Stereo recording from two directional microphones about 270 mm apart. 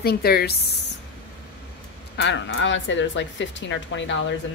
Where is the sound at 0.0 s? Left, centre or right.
Left.